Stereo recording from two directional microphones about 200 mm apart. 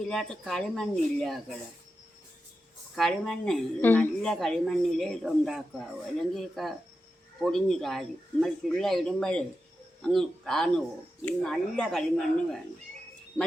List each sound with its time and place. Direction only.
0.0 s a woman's voice: 5° left (ahead or behind)
2.9 s a woman's voice: centre (ahead or behind)